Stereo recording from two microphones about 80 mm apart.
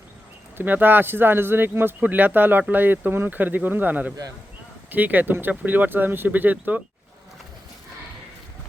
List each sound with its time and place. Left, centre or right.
0.5 s speech: right